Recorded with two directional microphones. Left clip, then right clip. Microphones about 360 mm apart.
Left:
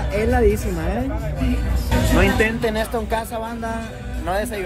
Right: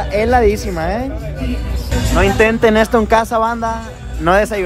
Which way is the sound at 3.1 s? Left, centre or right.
Right.